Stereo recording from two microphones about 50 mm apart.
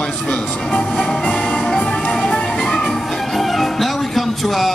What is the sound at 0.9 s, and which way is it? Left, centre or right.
Speech, centre.